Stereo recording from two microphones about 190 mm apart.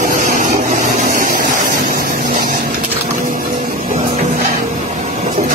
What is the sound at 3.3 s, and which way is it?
Music, 45° right (ahead or behind).